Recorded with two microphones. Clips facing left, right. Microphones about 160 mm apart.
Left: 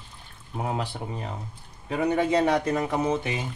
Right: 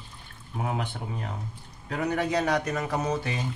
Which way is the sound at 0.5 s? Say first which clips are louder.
Left 2 dB; 25° left (ahead or behind).